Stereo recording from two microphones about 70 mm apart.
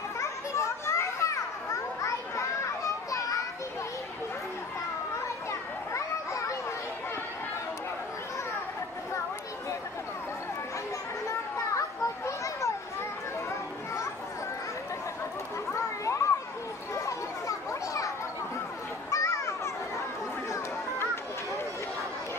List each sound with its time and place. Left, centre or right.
0.2 s children playing: left
5.5 s children playing: left
11.2 s children playing: left
15.7 s a sound: left
16.9 s children playing: left
20.5 s a sound: left